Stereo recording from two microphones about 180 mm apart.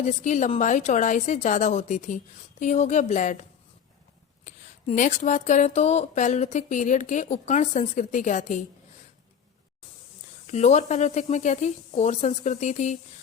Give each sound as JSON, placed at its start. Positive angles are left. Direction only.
{"t": 0.0, "sound": "a woman's voice", "side_deg": 40}
{"t": 4.4, "sound": "speech", "side_deg": 45}
{"t": 10.4, "sound": "speech", "side_deg": 40}